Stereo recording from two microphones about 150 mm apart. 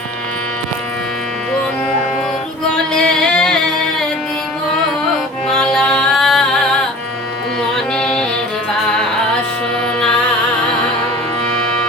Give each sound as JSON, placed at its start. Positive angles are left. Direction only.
{"t": 2.7, "sound": "singing", "side_deg": 5}
{"t": 5.5, "sound": "music", "side_deg": 5}
{"t": 7.9, "sound": "music", "side_deg": 5}